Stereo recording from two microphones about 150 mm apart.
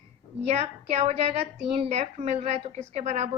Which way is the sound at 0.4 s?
45° right (ahead or behind).